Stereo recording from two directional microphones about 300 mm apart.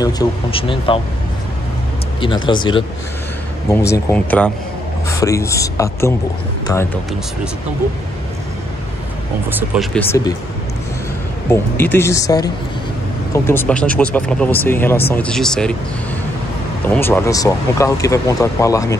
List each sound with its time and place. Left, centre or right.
0.0 s speech: centre
2.1 s speech: centre
9.5 s speech: centre
9.9 s speech: centre
11.5 s speech: centre
16.9 s speech: centre